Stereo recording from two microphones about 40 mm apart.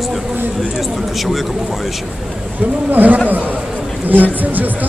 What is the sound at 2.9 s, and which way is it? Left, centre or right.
Speech, right.